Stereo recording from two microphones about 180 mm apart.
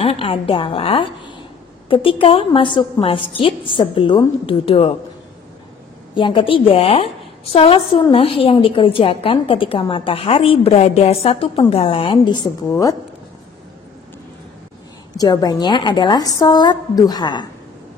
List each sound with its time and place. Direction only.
0.0 s a woman's voice: 30° left (ahead or behind)
6.1 s a woman's voice: 25° left (ahead or behind)
15.1 s a woman's voice: 20° left (ahead or behind)